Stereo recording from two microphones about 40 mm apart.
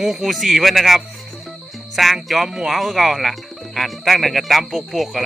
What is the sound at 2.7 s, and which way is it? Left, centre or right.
Speech, centre.